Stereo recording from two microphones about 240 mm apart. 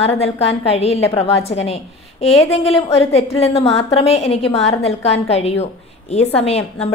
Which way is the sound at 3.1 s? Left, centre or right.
Left.